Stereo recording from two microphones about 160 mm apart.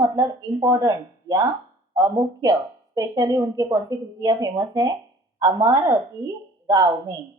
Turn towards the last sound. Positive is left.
turn(degrees=-20)  # may be behind; listen again after turning